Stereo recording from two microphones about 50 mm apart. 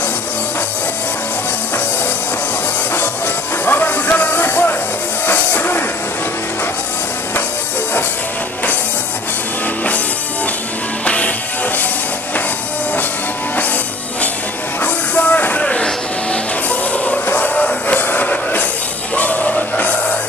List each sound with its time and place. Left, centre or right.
3.6 s music: left
11.1 s music: left
14.8 s music: left
15.6 s music: centre